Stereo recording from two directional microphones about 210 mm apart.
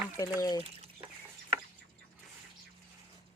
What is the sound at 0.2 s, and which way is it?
Speech, 20° left (ahead or behind).